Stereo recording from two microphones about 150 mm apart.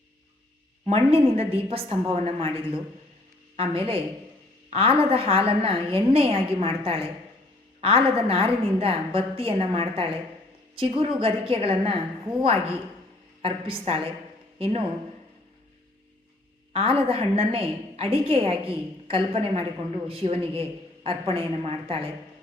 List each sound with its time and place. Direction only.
0.9 s a woman's voice: 40° right (ahead or behind)
13.4 s a woman's voice: 35° right (ahead or behind)
16.7 s a woman's voice: 35° right (ahead or behind)